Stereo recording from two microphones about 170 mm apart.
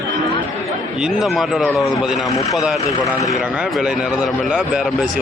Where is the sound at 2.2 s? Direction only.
20° left (ahead or behind).